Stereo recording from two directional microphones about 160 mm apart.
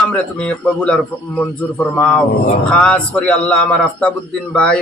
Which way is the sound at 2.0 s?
5° left (ahead or behind).